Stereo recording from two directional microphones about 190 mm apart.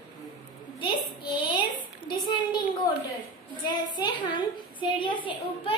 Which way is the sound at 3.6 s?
25° left (ahead or behind).